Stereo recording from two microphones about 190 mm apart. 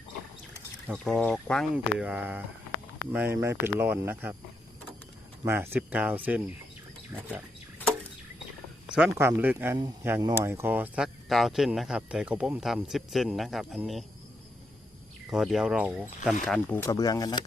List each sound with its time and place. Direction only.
0.9 s speech: centre (ahead or behind)
5.5 s speech: 10° right (ahead or behind)
8.9 s speech: 5° right (ahead or behind)
9.7 s speech: 20° right (ahead or behind); by 14.0 s centre (ahead or behind)
15.3 s speech: centre (ahead or behind); by 17.4 s 20° left (ahead or behind)